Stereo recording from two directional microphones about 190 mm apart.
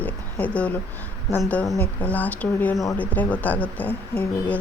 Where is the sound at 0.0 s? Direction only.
10° left (ahead or behind).